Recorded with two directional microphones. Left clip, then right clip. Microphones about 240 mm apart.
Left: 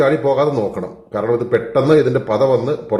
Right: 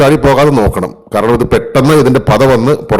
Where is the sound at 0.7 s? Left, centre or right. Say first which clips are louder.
Right 9 dB; right.